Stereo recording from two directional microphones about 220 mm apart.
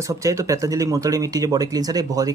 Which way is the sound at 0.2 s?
15° right (ahead or behind).